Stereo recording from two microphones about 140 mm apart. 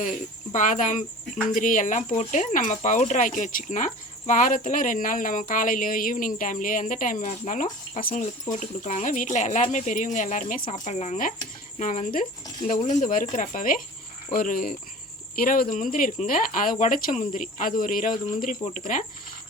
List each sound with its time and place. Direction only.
0.5 s speech: 65° left (ahead or behind)
10.7 s speech: 55° left (ahead or behind); by 13.7 s 75° left (ahead or behind)
14.3 s speech: 90° left
15.7 s speech: 70° left (ahead or behind)
18.6 s speech: 60° left (ahead or behind)